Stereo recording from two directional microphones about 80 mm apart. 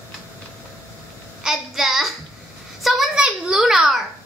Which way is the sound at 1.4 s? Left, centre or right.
Centre.